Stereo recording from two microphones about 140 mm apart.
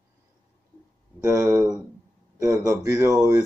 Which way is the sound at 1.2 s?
20° right (ahead or behind).